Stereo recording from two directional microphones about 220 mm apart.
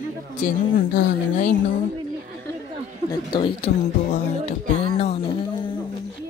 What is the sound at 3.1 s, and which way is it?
Speech, 20° left (ahead or behind).